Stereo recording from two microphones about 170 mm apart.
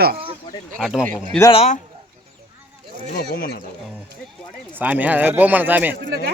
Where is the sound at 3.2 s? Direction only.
65° left (ahead or behind).